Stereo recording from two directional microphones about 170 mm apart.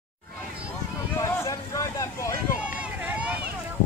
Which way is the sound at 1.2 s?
20° left (ahead or behind).